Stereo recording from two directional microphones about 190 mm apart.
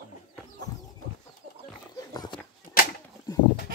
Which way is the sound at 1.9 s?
20° left (ahead or behind).